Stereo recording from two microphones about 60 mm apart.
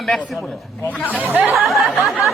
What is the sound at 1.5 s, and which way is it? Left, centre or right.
Speech, centre.